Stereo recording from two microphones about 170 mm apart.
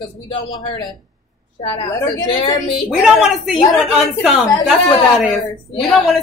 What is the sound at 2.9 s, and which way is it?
A woman's voice, centre (ahead or behind).